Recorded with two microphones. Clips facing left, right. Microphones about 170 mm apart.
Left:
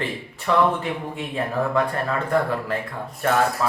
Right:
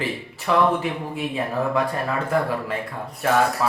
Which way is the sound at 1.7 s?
5° right (ahead or behind).